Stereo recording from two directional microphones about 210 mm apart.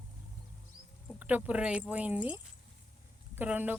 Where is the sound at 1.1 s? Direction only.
5° right (ahead or behind).